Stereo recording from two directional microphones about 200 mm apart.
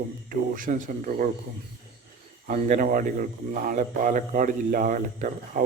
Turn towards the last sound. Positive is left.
turn(degrees=-40)  # may be behind; listen again after turning